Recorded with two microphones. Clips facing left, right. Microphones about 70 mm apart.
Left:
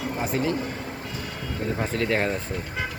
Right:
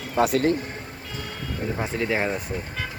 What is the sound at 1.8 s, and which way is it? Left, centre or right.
Speech, centre.